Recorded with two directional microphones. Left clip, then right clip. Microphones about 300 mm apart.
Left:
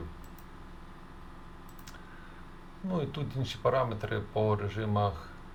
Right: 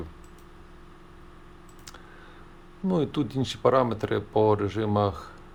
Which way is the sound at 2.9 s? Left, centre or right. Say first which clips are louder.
Right 9 dB; centre.